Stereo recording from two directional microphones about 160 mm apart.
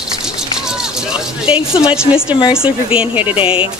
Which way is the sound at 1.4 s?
5° right (ahead or behind).